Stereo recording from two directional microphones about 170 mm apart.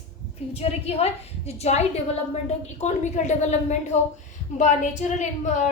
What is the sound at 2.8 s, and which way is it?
A woman's voice, 45° left (ahead or behind).